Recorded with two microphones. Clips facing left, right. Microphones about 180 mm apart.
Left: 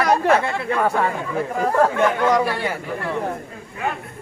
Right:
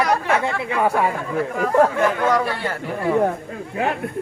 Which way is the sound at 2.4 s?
10° left (ahead or behind).